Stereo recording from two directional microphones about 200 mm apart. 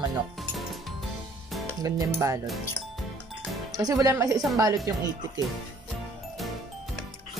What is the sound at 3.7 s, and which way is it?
Speech, 20° right (ahead or behind).